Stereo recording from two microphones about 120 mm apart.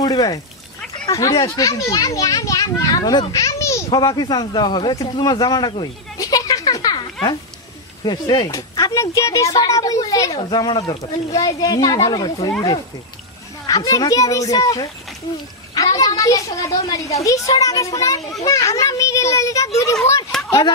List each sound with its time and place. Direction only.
0.0 s a child's voice: 30° left (ahead or behind)
3.9 s a man's voice: 35° left (ahead or behind)
8.5 s a child's voice: 25° left (ahead or behind)
13.7 s a child's voice: 30° left (ahead or behind)